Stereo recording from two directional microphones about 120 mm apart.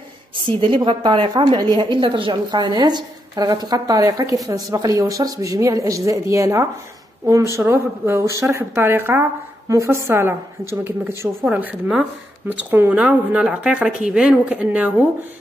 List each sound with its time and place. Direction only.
0.5 s a woman's voice: 45° right (ahead or behind); by 15.0 s 15° right (ahead or behind)